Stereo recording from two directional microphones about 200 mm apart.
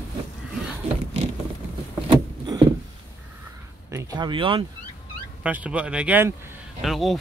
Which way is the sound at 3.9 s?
15° right (ahead or behind).